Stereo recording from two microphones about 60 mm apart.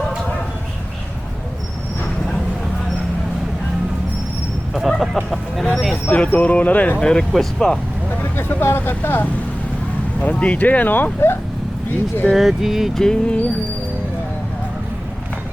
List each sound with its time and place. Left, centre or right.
4.7 s chicken: centre
5.7 s a sound: centre
6.1 s speech: left
7.0 s speech: centre
8.2 s speech: left
10.2 s speech: left
12.3 s speech: centre
12.9 s speech: centre